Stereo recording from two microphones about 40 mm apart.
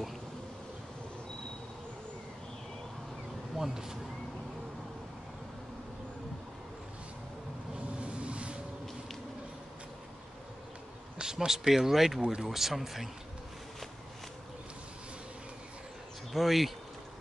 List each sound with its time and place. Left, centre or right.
3.5 s speech: centre
8.0 s a sound: right
11.1 s speech: centre
16.3 s speech: centre